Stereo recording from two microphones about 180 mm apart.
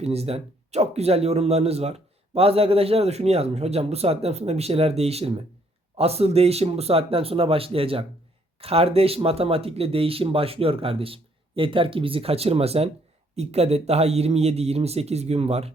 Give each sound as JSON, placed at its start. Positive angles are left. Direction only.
{"t": 0.0, "sound": "a man's voice", "side_deg": -35}